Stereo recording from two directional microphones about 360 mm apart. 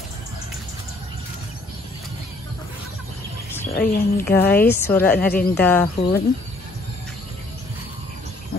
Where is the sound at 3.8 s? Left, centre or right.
Left.